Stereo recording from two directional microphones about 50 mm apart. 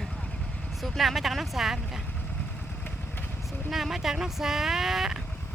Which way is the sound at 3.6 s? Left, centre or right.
Centre.